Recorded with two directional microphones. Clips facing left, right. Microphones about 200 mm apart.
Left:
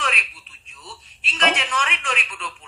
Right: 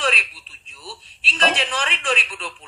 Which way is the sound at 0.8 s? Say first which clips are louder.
Right 3 dB; 35° right (ahead or behind).